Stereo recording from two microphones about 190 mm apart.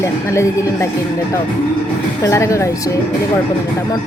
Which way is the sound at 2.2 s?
15° left (ahead or behind).